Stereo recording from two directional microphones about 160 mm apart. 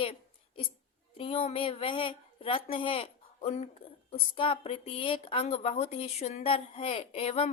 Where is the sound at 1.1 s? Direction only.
35° left (ahead or behind).